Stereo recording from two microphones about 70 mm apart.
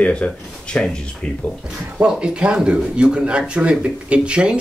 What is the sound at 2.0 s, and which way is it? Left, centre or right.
Speech, centre.